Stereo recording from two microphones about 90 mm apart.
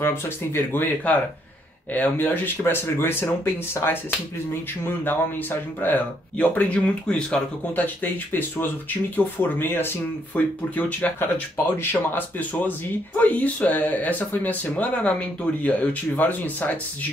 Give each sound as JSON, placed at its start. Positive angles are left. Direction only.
{"t": 0.0, "sound": "speech", "side_deg": 25}